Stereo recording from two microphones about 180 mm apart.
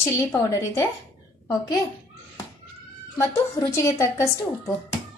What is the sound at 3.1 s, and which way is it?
A woman's voice, 15° left (ahead or behind).